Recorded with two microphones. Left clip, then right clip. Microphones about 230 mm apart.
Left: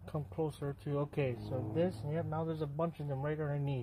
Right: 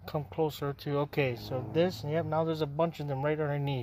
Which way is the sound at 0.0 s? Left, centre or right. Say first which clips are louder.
Right 7 dB; right.